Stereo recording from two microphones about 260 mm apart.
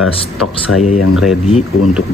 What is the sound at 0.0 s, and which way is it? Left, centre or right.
Speech, left.